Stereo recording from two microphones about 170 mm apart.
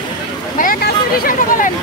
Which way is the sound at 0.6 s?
60° left (ahead or behind).